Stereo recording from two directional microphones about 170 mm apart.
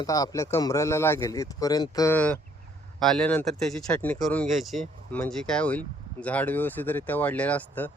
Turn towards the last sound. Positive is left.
turn(degrees=10)  # may be behind; listen again after turning